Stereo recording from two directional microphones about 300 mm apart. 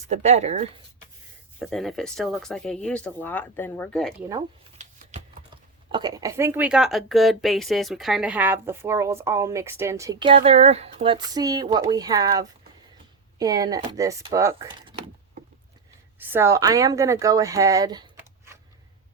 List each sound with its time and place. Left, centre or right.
0.1 s speech: right
1.5 s speech: centre
4.8 s shuffling cards: right
5.9 s speech: centre
16.1 s a woman's voice: centre